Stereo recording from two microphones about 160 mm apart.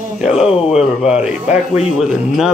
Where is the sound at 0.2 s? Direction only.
5° right (ahead or behind).